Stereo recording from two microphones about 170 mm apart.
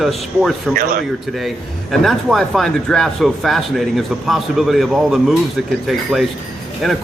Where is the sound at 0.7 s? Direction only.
60° right (ahead or behind).